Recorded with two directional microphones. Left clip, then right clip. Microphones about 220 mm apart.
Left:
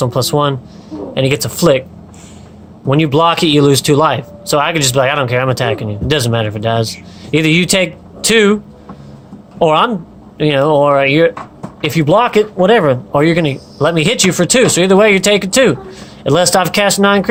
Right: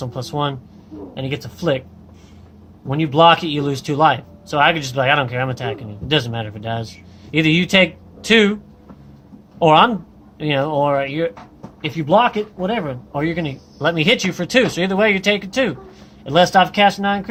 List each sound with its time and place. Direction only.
0.0 s speech: 25° left (ahead or behind)
2.9 s speech: 35° left (ahead or behind)
9.6 s speech: 25° left (ahead or behind)